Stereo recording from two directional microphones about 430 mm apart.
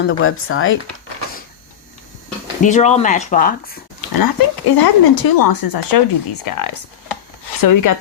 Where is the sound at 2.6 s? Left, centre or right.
Centre.